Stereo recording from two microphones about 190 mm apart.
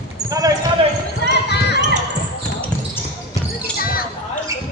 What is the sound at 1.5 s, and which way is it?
Basketball bounce, 60° left (ahead or behind).